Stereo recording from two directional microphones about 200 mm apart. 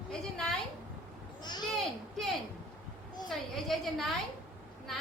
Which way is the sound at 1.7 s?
Centre (ahead or behind).